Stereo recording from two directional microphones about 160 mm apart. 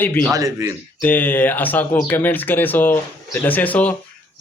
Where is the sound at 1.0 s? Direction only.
10° left (ahead or behind).